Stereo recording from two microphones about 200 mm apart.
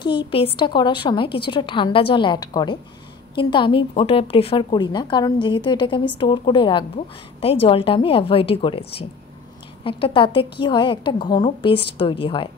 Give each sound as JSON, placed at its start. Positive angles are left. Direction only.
{"t": 0.0, "sound": "a woman's voice", "side_deg": 25}